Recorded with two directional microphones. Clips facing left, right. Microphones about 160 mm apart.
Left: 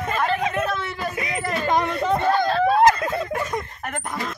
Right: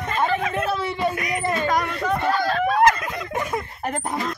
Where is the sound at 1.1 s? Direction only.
25° left (ahead or behind).